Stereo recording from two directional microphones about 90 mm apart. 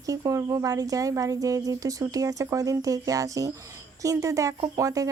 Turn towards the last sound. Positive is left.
turn(degrees=-40)  # may be behind; listen again after turning